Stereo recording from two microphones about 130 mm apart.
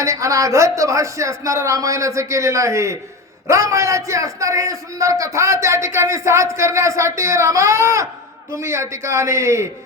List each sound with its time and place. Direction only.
0.0 s a man's voice: 25° right (ahead or behind)